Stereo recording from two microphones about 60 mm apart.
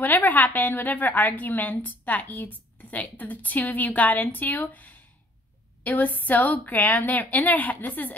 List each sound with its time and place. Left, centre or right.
0.0 s a woman's voice: left